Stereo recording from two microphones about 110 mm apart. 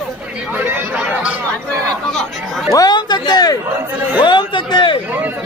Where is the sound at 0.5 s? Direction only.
15° right (ahead or behind).